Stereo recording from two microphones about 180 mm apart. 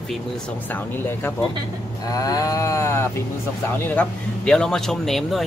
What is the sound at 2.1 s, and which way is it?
Livestock, 20° left (ahead or behind).